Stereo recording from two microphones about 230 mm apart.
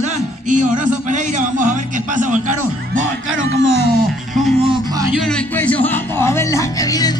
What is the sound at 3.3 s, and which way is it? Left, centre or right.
Speech, right.